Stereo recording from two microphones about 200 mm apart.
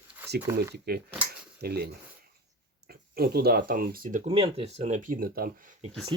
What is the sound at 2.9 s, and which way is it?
Speech, 50° right (ahead or behind).